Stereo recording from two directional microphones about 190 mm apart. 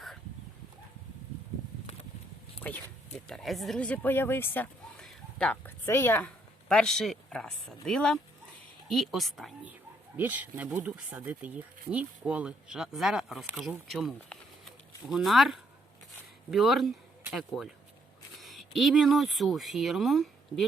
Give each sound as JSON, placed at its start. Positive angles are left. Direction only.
{"t": 2.6, "sound": "speech", "side_deg": 10}